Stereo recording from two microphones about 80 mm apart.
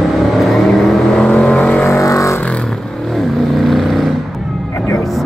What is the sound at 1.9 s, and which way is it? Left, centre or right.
Vehicle, left.